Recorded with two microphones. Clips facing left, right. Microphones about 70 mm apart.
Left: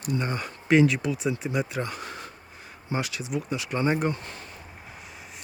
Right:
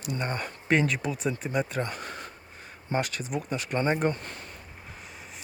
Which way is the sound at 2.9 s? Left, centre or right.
Right.